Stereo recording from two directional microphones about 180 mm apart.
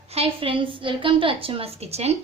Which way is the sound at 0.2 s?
30° right (ahead or behind).